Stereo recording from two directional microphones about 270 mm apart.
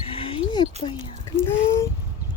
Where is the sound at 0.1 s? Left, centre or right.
Centre.